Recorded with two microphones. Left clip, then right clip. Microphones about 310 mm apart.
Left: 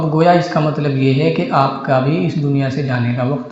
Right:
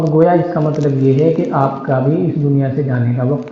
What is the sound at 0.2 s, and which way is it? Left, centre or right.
Speech, left.